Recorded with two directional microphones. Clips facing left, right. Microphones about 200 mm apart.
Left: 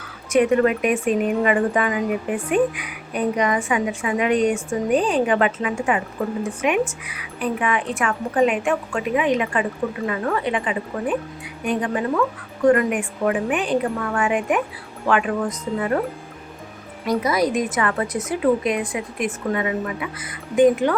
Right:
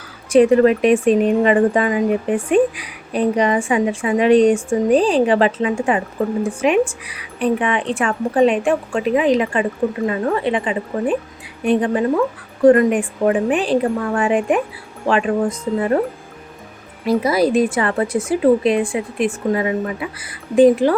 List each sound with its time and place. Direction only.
0.3 s speech: 30° right (ahead or behind)
17.1 s speech: 30° right (ahead or behind)